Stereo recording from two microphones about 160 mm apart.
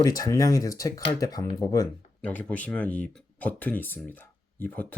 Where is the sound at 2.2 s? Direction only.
10° left (ahead or behind).